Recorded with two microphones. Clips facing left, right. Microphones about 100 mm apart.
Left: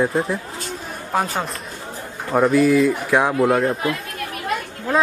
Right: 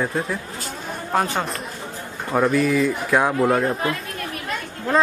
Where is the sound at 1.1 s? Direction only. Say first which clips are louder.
Even; centre (ahead or behind).